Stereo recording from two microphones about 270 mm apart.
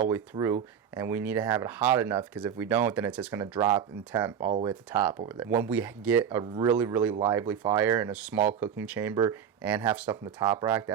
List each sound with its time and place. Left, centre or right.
0.0 s speech: centre